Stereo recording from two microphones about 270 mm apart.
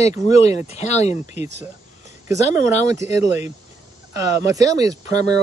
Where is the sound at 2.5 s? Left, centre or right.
Centre.